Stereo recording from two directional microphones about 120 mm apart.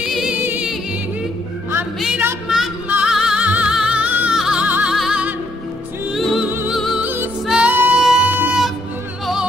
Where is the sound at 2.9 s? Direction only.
5° right (ahead or behind).